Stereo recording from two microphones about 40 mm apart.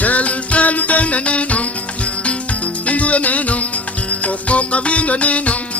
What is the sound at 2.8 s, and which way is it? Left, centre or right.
Music, left.